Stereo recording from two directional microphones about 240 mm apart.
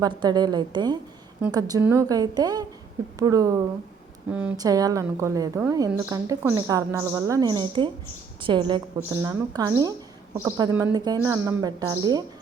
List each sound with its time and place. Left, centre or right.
0.0 s a woman's voice: centre